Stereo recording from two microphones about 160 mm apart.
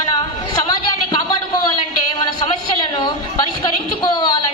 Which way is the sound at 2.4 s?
30° left (ahead or behind).